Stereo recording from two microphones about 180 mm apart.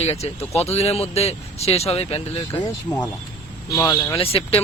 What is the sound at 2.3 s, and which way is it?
Speech, 20° left (ahead or behind).